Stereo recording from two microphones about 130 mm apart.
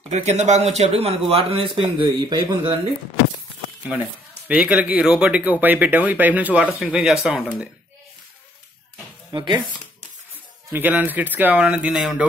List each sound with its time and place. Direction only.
0.1 s a man's voice: 60° right (ahead or behind); by 2.8 s 40° right (ahead or behind)
4.5 s speech: 10° right (ahead or behind)
9.3 s speech: 35° right (ahead or behind)
10.7 s speech: 15° right (ahead or behind)